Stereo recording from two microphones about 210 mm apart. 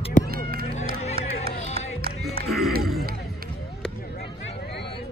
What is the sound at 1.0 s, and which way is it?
Music, 30° left (ahead or behind).